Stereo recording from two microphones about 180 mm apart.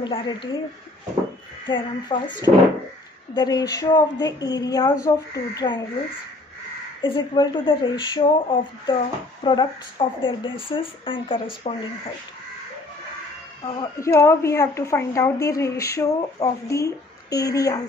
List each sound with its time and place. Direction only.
0.0 s speech: 25° left (ahead or behind)
1.7 s speech: 25° left (ahead or behind)
7.0 s speech: 25° left (ahead or behind)
13.9 s a woman's voice: 15° left (ahead or behind)